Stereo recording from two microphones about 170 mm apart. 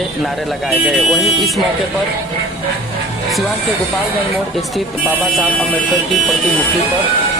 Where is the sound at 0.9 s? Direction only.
Centre (ahead or behind).